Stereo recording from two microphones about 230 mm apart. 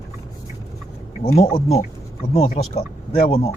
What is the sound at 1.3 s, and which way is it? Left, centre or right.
Speech, left.